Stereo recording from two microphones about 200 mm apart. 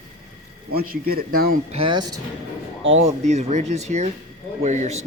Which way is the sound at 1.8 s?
20° right (ahead or behind).